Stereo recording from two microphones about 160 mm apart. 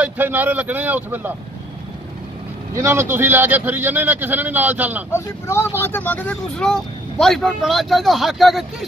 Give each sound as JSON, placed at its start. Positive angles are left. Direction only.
{"t": 0.0, "sound": "speech", "side_deg": -10}
{"t": 2.7, "sound": "speech", "side_deg": -15}
{"t": 5.1, "sound": "speech", "side_deg": 15}